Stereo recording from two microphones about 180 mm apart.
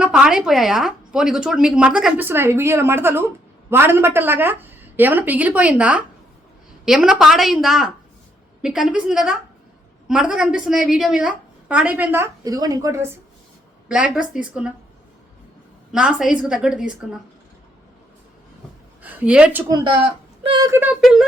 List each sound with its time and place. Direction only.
0.0 s a woman's voice: 5° right (ahead or behind)
13.8 s a woman's voice: 5° right (ahead or behind)
15.9 s a woman's voice: 5° right (ahead or behind)
19.0 s a woman's voice: 10° right (ahead or behind)
19.6 s speech: 20° right (ahead or behind)
21.0 s a woman's voice: centre (ahead or behind)